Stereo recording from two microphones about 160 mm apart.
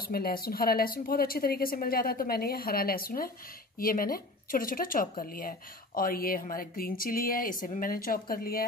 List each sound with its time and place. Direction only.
0.0 s speech: 70° left (ahead or behind)